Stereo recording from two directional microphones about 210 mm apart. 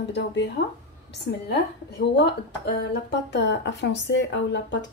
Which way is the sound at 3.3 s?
55° left (ahead or behind).